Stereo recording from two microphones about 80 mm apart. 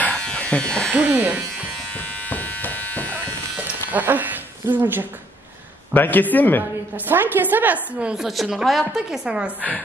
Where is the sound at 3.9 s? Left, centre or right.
Right.